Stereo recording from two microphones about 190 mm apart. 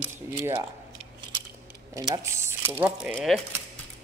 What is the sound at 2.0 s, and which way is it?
Speech, 20° right (ahead or behind).